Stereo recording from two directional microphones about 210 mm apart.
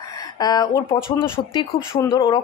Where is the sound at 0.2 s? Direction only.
20° left (ahead or behind).